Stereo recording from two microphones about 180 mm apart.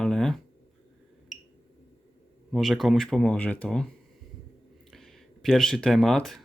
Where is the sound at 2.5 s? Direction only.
Centre (ahead or behind).